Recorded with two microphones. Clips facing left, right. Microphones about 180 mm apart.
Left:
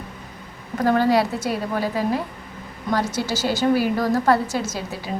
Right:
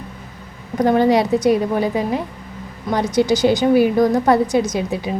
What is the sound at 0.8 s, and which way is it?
A woman's voice, 20° right (ahead or behind).